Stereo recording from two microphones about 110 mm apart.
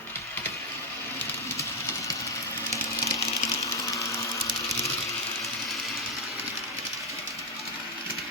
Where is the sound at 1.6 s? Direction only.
30° left (ahead or behind).